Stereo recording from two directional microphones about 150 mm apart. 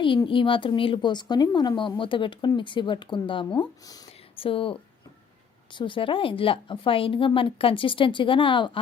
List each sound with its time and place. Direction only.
0.3 s a woman's voice: 35° left (ahead or behind)